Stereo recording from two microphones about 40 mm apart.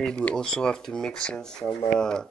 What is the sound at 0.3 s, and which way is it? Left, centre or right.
Speech, centre.